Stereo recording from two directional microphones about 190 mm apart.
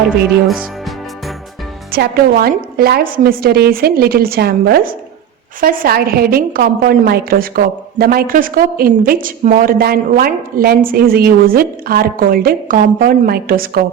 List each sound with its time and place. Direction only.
0.4 s speech: 5° right (ahead or behind)
1.9 s a woman's voice: 55° right (ahead or behind)